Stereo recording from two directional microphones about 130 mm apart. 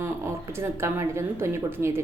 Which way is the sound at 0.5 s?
20° right (ahead or behind).